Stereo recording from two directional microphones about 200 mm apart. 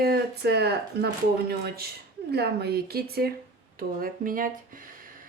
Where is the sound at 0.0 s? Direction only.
50° right (ahead or behind).